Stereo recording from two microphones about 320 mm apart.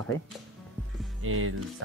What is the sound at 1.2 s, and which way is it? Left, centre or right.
Speech, right.